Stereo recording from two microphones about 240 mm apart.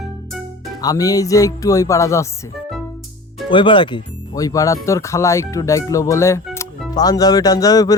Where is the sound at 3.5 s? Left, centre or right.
Left.